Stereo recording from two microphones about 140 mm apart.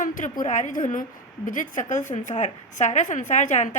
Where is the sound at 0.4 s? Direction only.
60° left (ahead or behind).